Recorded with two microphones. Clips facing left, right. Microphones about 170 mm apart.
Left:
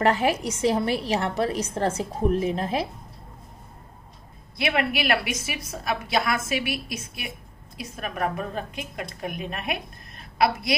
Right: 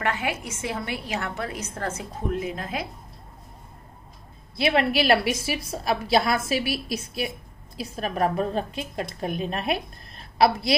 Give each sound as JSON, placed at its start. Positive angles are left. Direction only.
{"t": 0.0, "sound": "a woman's voice", "side_deg": 35}
{"t": 4.6, "sound": "a woman's voice", "side_deg": -30}